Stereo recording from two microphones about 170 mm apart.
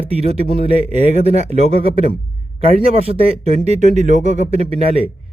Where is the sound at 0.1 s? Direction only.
35° right (ahead or behind).